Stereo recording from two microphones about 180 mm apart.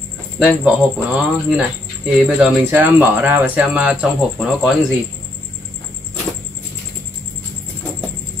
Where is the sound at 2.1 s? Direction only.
10° right (ahead or behind).